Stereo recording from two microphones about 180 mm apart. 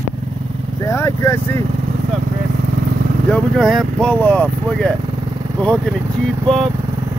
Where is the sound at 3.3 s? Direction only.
Centre (ahead or behind).